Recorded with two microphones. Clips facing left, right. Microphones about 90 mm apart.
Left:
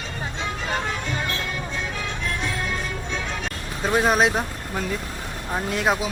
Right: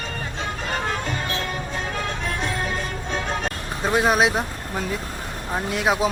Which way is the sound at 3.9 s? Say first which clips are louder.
Even; centre (ahead or behind).